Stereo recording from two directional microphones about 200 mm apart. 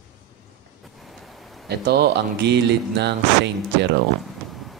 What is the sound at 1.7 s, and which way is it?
Speech, 55° right (ahead or behind).